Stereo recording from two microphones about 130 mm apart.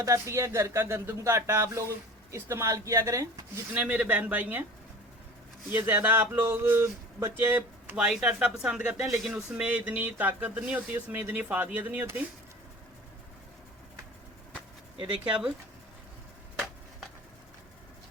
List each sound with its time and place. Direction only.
0.0 s speech: 25° right (ahead or behind)
3.8 s speech: 10° right (ahead or behind)
5.7 s speech: 15° right (ahead or behind)